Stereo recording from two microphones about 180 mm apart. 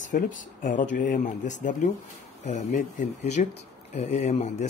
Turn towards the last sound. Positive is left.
turn(degrees=35)  # may be behind; listen again after turning